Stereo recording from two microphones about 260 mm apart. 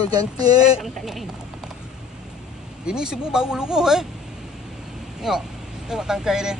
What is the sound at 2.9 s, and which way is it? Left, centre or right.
Speech, centre.